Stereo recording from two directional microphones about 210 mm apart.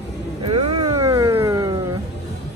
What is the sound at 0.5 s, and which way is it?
Vehicle, 25° right (ahead or behind).